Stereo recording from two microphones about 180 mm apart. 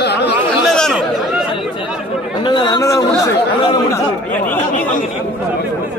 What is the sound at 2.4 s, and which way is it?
Chatter, 25° left (ahead or behind).